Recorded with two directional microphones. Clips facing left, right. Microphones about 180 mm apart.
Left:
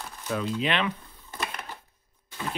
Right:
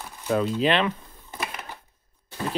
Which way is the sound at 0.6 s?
35° right (ahead or behind).